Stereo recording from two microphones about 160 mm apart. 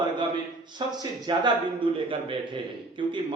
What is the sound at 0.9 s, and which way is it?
A man's voice, 25° right (ahead or behind).